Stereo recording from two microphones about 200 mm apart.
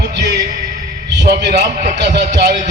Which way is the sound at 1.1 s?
60° right (ahead or behind).